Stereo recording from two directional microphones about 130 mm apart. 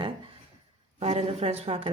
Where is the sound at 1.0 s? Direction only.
50° right (ahead or behind).